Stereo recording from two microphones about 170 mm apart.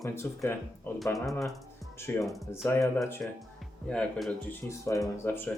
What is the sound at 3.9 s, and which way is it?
Speech, 5° left (ahead or behind).